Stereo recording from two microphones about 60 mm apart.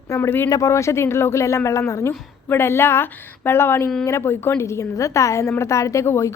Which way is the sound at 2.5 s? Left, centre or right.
Left.